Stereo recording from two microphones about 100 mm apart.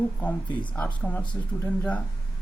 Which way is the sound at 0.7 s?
10° left (ahead or behind).